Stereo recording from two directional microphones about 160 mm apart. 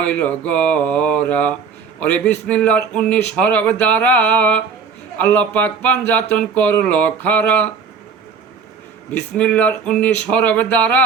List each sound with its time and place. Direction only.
0.0 s speech: 10° left (ahead or behind)
9.1 s speech: 10° left (ahead or behind)